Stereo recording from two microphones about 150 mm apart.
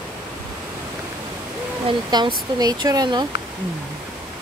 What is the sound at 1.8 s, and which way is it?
Speech, 30° right (ahead or behind).